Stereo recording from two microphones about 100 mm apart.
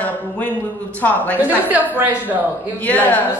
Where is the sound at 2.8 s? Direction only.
15° left (ahead or behind).